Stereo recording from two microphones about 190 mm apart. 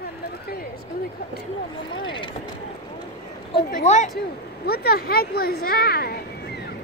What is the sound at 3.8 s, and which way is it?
Speech, 40° left (ahead or behind).